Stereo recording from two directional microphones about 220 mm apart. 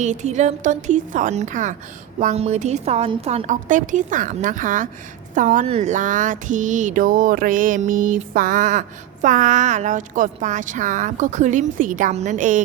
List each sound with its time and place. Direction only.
0.0 s speech: 30° right (ahead or behind)